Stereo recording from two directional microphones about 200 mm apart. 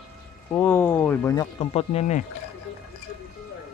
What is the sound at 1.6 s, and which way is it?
Speech, 30° left (ahead or behind).